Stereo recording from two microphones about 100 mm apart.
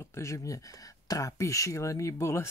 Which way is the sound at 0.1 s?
30° left (ahead or behind).